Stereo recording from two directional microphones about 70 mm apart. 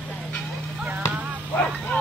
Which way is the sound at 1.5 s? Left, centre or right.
Centre.